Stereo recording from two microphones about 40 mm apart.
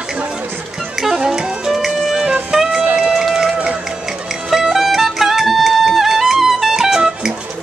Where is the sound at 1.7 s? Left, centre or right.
Centre.